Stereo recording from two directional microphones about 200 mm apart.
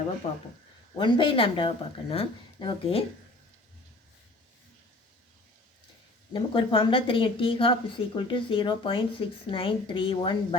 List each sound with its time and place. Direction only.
0.9 s a woman's voice: 25° left (ahead or behind)
6.3 s a woman's voice: 25° left (ahead or behind)